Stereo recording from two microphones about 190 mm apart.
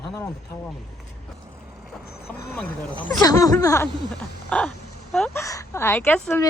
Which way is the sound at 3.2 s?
20° left (ahead or behind).